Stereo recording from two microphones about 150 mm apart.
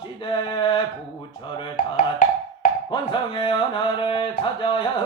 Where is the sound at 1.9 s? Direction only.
60° left (ahead or behind).